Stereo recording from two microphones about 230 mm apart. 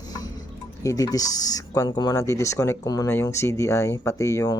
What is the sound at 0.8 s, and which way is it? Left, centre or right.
Speech, centre.